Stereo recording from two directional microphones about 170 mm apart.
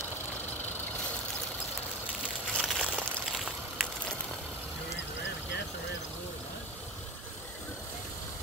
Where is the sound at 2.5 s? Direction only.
Centre (ahead or behind).